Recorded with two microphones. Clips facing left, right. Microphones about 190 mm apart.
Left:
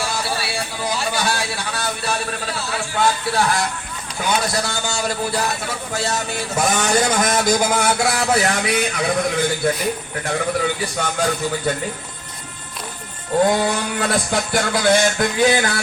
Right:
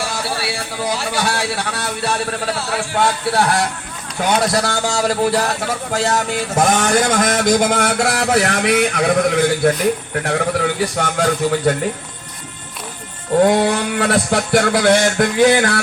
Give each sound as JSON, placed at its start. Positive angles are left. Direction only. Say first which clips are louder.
{"t": 0.9, "sound": "speech", "louder": "right 2 dB", "side_deg": -70}
{"t": 4.3, "sound": "a man's voice", "louder": "right 5 dB", "side_deg": -80}
{"t": 6.1, "sound": "a man's voice", "louder": "right 5 dB", "side_deg": -50}
{"t": 13.4, "sound": "speech", "louder": "right 4 dB", "side_deg": -70}